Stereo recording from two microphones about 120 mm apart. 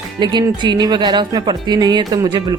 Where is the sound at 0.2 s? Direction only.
40° right (ahead or behind).